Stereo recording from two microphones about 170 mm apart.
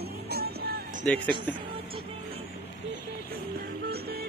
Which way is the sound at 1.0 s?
5° left (ahead or behind).